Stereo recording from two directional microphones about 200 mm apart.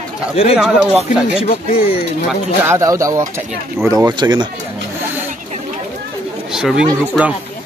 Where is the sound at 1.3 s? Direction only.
30° left (ahead or behind).